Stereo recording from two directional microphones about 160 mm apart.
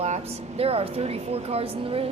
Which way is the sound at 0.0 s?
40° right (ahead or behind).